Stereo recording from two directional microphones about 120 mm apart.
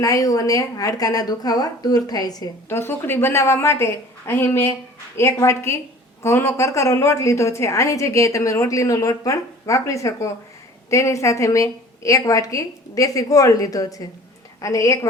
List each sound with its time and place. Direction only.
0.0 s a woman's voice: 30° left (ahead or behind)
2.6 s a woman's voice: 20° left (ahead or behind)